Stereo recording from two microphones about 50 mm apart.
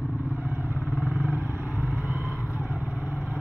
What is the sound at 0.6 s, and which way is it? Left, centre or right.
Vehicle, right.